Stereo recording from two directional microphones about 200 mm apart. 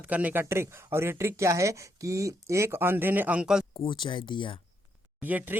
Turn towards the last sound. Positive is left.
turn(degrees=-10)  # may be behind; listen again after turning